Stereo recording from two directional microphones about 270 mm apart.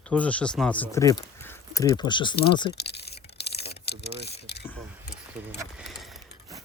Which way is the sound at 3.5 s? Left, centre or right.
Left.